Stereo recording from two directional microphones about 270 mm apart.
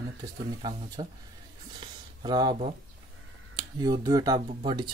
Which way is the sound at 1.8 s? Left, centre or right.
Centre.